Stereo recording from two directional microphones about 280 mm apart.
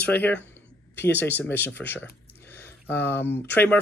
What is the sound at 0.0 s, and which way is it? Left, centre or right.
Speech, centre.